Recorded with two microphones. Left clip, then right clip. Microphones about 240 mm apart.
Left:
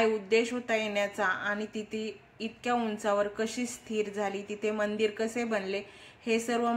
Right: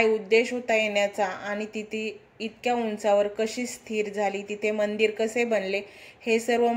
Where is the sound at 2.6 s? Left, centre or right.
Left.